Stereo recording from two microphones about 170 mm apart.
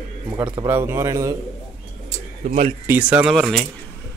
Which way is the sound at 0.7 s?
15° right (ahead or behind).